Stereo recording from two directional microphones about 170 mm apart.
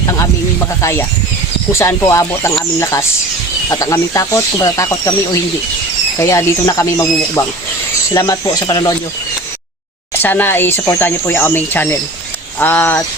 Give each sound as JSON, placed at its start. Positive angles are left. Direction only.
{"t": 0.8, "sound": "speech", "side_deg": 15}
{"t": 10.2, "sound": "speech", "side_deg": 10}